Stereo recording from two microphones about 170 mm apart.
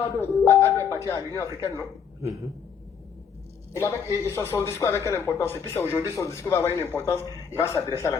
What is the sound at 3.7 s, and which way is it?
A woman's voice, 15° left (ahead or behind).